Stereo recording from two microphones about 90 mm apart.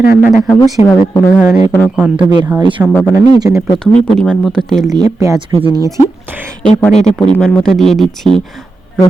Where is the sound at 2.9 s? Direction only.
25° left (ahead or behind).